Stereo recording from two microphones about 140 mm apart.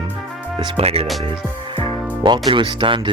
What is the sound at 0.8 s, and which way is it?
Speech, 45° right (ahead or behind).